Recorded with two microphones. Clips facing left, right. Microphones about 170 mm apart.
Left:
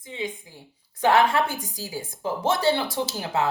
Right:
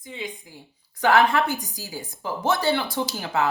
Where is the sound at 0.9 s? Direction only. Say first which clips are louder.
Even; 25° left (ahead or behind).